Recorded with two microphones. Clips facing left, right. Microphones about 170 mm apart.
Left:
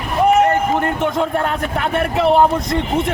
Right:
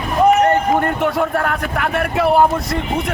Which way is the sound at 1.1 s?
25° left (ahead or behind).